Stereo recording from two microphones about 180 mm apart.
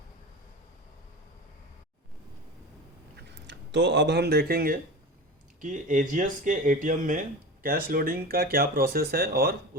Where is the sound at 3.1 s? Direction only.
80° right; by 4.7 s 55° right (ahead or behind).